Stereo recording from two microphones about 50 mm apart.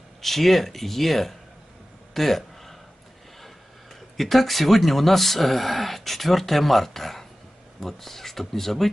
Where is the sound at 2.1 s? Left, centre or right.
Centre.